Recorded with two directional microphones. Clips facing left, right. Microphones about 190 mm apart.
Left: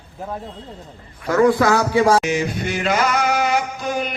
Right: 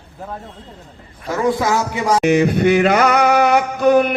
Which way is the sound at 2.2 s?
60° right (ahead or behind).